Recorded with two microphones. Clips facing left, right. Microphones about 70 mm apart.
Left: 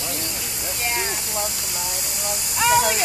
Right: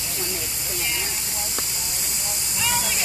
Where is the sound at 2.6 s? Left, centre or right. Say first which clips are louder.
Left 9 dB; left.